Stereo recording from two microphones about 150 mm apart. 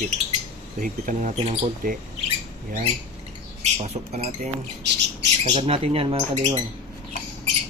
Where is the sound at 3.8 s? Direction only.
45° right (ahead or behind).